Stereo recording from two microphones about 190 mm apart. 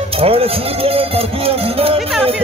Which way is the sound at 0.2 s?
30° right (ahead or behind).